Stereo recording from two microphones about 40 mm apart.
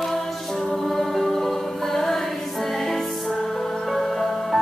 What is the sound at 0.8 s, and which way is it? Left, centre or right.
Choir, centre.